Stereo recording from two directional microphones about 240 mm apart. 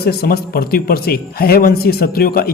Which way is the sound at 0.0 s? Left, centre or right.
Left.